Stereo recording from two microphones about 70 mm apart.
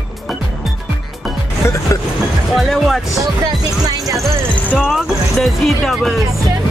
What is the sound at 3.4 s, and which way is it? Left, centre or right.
Music, right.